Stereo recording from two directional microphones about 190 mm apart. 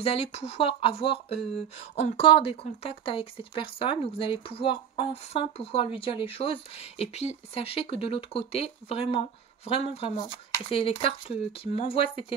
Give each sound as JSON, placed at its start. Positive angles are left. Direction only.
{"t": 0.0, "sound": "speech", "side_deg": 30}